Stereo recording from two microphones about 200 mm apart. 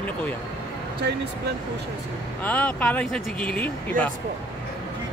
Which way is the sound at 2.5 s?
10° left (ahead or behind).